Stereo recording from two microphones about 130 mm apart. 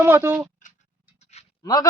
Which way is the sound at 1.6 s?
30° left (ahead or behind).